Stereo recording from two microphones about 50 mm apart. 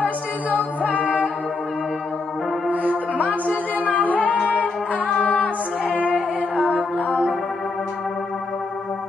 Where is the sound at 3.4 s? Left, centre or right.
Left.